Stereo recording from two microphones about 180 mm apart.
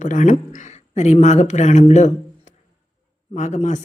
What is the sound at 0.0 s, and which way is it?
Speech, 45° left (ahead or behind).